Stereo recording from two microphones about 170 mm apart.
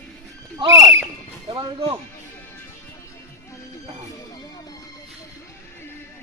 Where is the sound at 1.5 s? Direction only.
25° right (ahead or behind).